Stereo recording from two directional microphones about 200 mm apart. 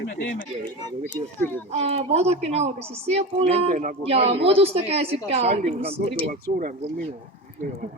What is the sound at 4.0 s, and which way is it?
A woman's voice, 30° right (ahead or behind).